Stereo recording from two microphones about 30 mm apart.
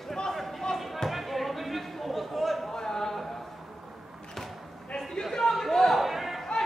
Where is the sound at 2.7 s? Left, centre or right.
Centre.